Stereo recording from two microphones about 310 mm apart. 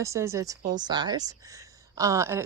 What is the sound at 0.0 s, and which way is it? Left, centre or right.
Speech, centre.